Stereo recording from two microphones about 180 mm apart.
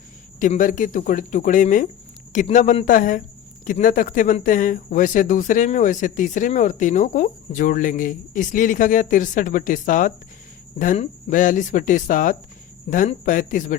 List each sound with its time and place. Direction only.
0.3 s speech: 45° left (ahead or behind)